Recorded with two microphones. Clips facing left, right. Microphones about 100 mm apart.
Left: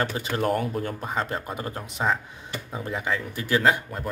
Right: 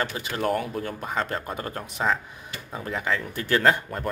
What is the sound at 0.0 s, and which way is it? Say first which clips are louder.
Speech: left 1 dB; 35° left (ahead or behind).